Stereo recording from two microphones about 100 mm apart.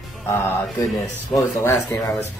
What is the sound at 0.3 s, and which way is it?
Music, 30° left (ahead or behind).